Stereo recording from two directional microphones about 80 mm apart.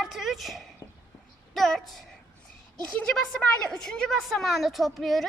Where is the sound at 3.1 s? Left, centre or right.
Centre.